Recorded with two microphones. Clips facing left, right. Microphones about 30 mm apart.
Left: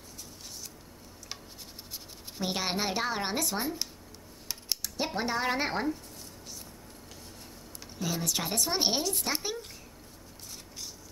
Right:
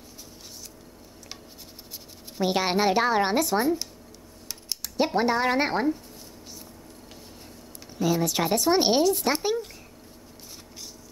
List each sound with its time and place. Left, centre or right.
2.4 s speech: centre
3.4 s speech: centre
4.8 s speech: centre
8.0 s speech: centre